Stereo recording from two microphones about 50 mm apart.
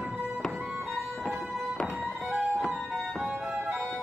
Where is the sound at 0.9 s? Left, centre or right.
Centre.